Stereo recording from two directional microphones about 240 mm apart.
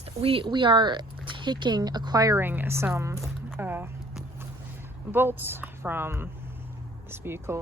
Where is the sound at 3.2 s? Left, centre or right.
Centre.